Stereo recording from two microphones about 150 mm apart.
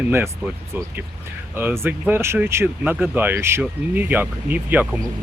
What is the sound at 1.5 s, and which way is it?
Speech, 15° right (ahead or behind).